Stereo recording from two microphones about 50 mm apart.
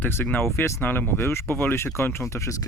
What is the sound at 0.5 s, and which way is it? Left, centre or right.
Speech, left.